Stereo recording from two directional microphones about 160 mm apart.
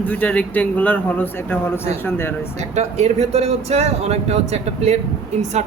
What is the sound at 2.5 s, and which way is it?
Speech, 45° right (ahead or behind).